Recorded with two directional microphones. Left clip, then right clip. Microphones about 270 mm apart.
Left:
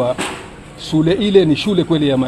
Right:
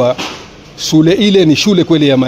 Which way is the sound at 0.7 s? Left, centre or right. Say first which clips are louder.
Right 6 dB; right.